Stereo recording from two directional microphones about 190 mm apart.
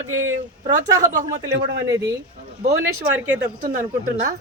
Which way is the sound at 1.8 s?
15° right (ahead or behind).